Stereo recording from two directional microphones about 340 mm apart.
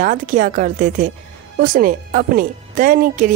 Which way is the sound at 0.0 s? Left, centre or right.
Right.